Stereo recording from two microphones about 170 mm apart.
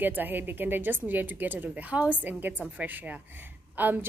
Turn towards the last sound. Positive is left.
turn(degrees=-10)  # may be behind; listen again after turning